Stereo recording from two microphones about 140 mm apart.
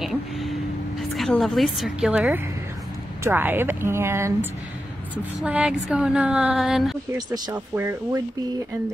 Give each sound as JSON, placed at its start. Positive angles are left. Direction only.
{"t": 0.0, "sound": "a woman's voice", "side_deg": 0}
{"t": 7.1, "sound": "speech", "side_deg": -30}
{"t": 7.5, "sound": "speech", "side_deg": -15}